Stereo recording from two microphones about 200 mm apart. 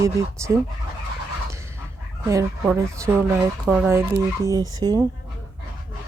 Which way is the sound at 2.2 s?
15° right (ahead or behind).